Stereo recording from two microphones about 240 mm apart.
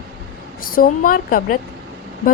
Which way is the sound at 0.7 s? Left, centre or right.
Left.